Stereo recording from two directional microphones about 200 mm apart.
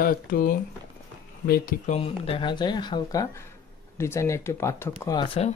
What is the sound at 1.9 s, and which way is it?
Speech, 30° left (ahead or behind).